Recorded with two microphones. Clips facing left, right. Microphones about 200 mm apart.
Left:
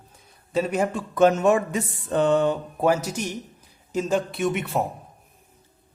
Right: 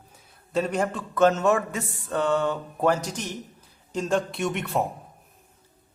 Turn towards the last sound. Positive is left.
turn(degrees=0)  # may be behind; listen again after turning